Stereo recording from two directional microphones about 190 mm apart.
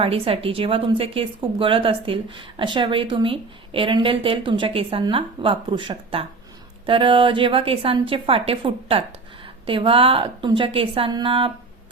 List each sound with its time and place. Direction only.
0.0 s a woman's voice: 30° right (ahead or behind)